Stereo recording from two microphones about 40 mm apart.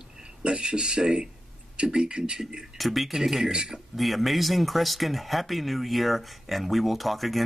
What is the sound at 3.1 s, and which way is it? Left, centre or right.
Speech, centre.